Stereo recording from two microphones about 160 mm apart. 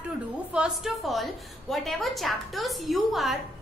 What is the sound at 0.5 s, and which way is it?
A woman's voice, 5° right (ahead or behind).